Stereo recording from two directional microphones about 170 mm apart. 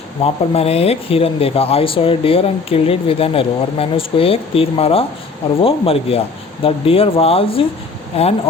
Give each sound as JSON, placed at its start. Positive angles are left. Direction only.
{"t": 0.2, "sound": "speech", "side_deg": 35}